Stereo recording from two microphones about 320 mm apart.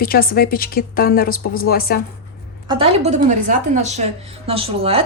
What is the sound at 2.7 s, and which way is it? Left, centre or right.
A woman's voice, centre.